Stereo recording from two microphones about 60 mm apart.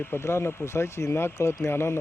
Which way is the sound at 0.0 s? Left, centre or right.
Left.